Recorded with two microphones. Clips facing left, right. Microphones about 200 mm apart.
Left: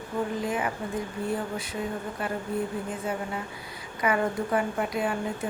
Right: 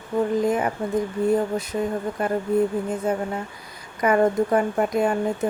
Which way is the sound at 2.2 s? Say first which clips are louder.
Right 10 dB; 45° right (ahead or behind).